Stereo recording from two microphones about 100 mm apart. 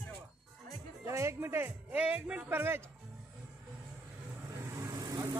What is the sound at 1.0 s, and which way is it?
Speech, 30° right (ahead or behind).